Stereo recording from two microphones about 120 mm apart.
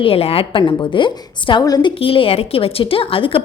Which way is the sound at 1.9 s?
50° left (ahead or behind).